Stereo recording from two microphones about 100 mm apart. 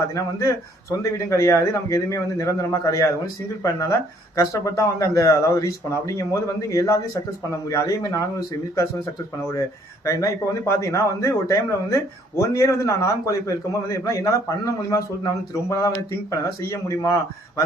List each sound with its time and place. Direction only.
0.1 s a man's voice: 30° left (ahead or behind)